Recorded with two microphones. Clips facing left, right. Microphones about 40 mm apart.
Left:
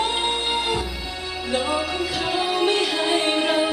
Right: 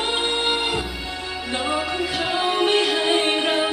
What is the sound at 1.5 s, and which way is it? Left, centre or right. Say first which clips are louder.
Music: left 1 dB; right.